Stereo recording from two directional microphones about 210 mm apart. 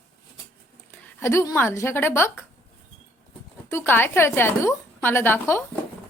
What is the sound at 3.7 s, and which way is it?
A woman's voice, 10° left (ahead or behind).